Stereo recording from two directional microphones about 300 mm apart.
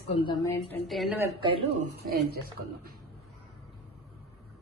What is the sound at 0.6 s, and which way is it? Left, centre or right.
Speech, centre.